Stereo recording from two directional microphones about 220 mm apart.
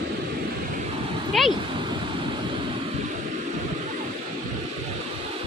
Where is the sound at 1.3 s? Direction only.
Centre (ahead or behind).